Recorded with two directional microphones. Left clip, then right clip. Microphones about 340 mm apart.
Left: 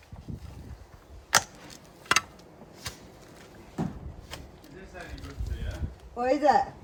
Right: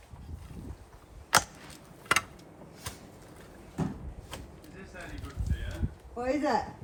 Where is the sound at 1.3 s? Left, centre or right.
Centre.